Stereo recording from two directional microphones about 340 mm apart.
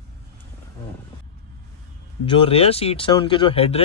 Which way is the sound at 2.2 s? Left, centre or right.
Centre.